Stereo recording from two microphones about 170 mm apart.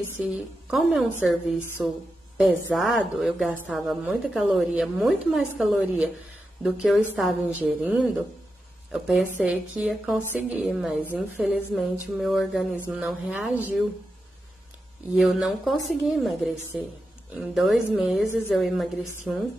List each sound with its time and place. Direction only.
0.2 s speech: 5° right (ahead or behind)
15.1 s speech: centre (ahead or behind)